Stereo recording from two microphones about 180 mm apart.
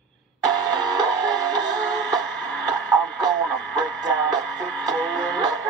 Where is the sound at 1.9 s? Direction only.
5° left (ahead or behind).